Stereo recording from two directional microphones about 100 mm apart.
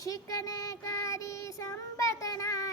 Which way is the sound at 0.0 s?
35° left (ahead or behind).